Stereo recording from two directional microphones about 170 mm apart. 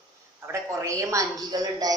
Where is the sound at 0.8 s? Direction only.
20° right (ahead or behind).